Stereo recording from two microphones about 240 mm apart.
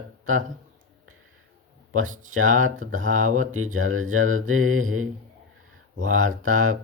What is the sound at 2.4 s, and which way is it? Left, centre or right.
Mantra, right.